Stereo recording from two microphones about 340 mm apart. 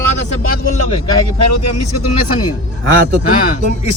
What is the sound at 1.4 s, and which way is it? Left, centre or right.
Speech, left.